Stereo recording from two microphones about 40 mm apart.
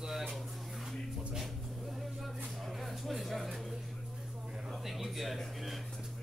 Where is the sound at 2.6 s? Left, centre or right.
Centre.